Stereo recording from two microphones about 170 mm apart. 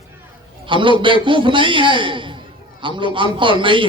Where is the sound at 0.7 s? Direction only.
30° right (ahead or behind).